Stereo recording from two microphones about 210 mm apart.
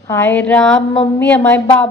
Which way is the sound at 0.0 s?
10° left (ahead or behind).